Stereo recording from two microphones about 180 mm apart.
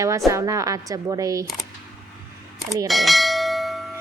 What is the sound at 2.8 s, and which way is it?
Bell, centre (ahead or behind).